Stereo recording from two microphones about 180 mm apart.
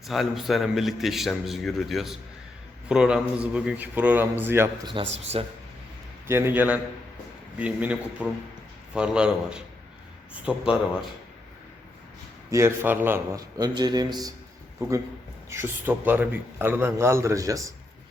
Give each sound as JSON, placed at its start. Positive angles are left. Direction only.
{"t": 0.1, "sound": "a man's voice", "side_deg": 0}
{"t": 4.9, "sound": "a man's voice", "side_deg": -30}
{"t": 6.2, "sound": "a man's voice", "side_deg": -15}
{"t": 12.5, "sound": "a man's voice", "side_deg": -15}